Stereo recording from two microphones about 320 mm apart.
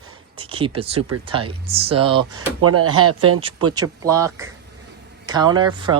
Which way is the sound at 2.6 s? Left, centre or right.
Right.